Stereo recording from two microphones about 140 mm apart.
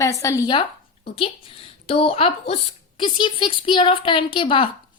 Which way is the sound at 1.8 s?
45° left (ahead or behind).